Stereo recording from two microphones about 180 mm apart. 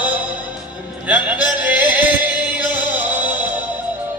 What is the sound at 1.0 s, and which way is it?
Music, 5° right (ahead or behind).